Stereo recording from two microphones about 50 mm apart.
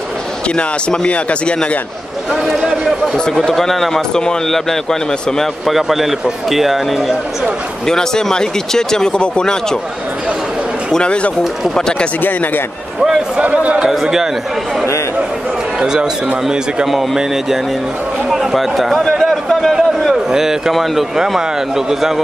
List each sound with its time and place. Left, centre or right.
0.6 s speech: left
3.3 s speech: centre
5.4 s a man's voice: centre
7.8 s speech: centre
10.9 s speech: centre
13.4 s speech: right
15.8 s speech: centre
16.4 s a man's voice: centre
19.0 s a sound: centre
19.7 s speech: centre